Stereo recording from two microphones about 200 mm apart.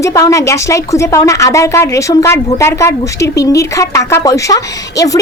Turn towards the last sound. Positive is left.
turn(degrees=15)  # may be behind; listen again after turning